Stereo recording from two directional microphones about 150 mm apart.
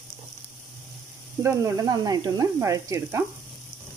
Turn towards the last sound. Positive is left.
turn(degrees=-20)  # may be behind; listen again after turning